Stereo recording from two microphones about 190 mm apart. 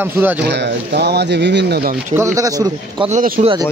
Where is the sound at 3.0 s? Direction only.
45° right (ahead or behind).